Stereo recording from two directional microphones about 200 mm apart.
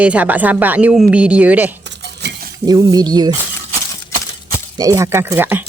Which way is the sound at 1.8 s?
60° right (ahead or behind).